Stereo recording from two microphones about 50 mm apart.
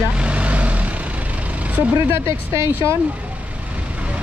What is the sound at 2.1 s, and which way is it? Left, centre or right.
Speech, right.